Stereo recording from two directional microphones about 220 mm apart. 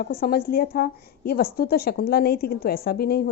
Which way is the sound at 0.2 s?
45° left (ahead or behind).